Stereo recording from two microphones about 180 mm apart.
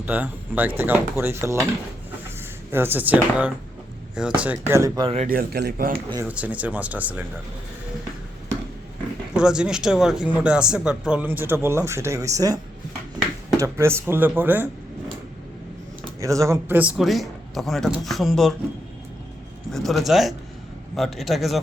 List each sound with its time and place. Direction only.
0.0 s speech: 10° right (ahead or behind)
2.7 s speech: 10° right (ahead or behind)
5.0 s speech: 35° right (ahead or behind)
5.3 s speech: 60° right (ahead or behind)
6.2 s speech: 10° right (ahead or behind)
9.3 s speech: 5° right (ahead or behind)
13.6 s speech: 15° right (ahead or behind)
16.2 s speech: 15° right (ahead or behind); by 18.5 s centre (ahead or behind)
19.7 s speech: centre (ahead or behind)